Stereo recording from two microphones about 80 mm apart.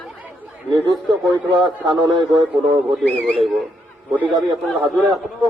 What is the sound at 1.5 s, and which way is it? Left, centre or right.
Speech, right.